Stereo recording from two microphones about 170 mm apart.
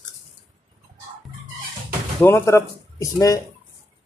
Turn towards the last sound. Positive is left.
turn(degrees=20)  # may be behind; listen again after turning